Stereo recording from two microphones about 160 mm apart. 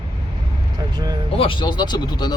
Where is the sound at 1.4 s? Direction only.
30° left (ahead or behind).